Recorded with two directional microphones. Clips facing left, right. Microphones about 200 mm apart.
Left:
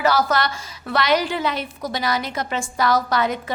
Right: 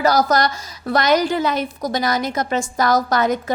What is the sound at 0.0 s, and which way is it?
A woman's voice, 40° right (ahead or behind).